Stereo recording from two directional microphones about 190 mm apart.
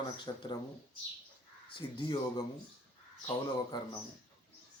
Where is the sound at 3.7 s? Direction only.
25° left (ahead or behind).